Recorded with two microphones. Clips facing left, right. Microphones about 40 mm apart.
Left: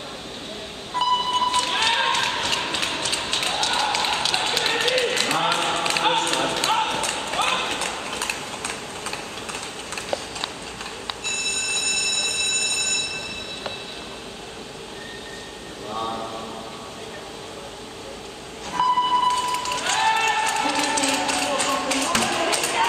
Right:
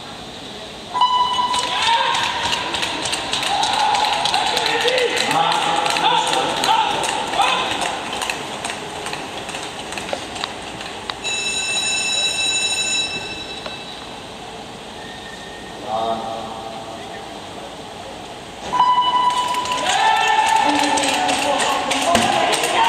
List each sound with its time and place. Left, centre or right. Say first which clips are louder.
0.9 s run: right 5 dB; right
11.2 s train: right 4 dB; right
18.7 s a sound: right 5 dB; right